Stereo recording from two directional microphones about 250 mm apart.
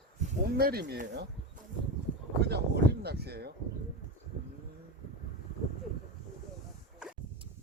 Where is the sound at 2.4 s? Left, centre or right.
Right.